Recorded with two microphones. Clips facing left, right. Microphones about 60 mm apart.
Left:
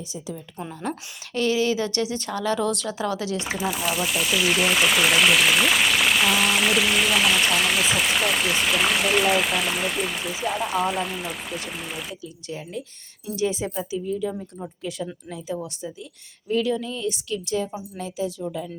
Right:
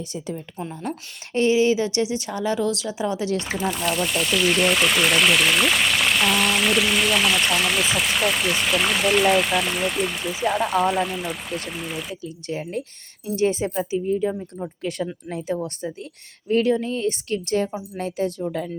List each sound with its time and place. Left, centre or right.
1.3 s speech: right
2.6 s speech: centre
3.0 s speech: right
3.4 s speech: centre
12.5 s speech: right
14.8 s speech: right